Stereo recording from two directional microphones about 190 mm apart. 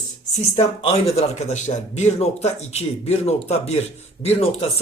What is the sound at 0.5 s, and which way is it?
Speech, 30° left (ahead or behind).